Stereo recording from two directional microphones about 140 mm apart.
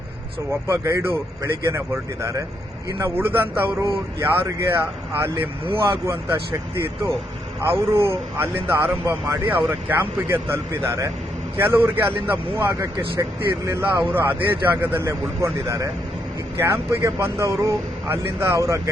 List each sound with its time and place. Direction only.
0.7 s speech: 20° right (ahead or behind)
3.0 s a man's voice: 15° right (ahead or behind)
7.6 s a man's voice: 15° right (ahead or behind)
16.6 s a man's voice: 15° right (ahead or behind)